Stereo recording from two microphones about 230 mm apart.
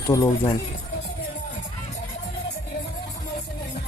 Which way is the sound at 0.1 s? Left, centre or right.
Centre.